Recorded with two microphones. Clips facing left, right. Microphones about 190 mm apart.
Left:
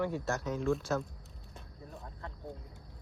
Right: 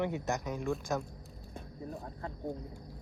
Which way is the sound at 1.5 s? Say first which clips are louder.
Right 8 dB; 50° right (ahead or behind).